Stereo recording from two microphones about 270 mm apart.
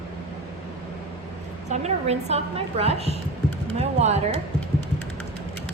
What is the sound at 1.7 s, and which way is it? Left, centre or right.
A woman's voice, right.